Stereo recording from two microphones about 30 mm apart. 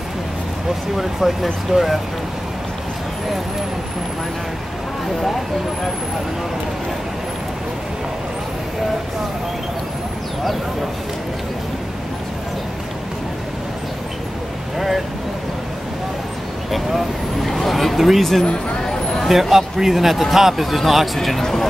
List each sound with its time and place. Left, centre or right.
0.9 s speech: centre
16.7 s speech: centre
18.4 s speech: left
18.8 s a sound: centre
19.5 s speech: centre